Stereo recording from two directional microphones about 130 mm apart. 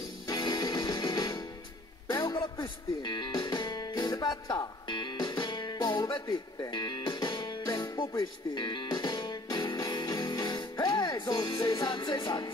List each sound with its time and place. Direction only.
0.3 s music: 35° left (ahead or behind)